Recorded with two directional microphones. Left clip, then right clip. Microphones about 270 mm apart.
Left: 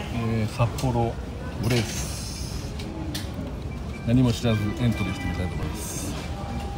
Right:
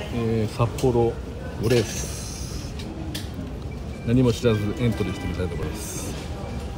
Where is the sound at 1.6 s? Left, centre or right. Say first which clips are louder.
Right 5 dB; centre.